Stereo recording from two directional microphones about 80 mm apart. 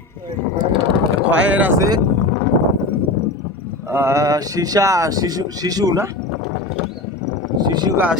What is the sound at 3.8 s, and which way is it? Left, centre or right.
Speech, right.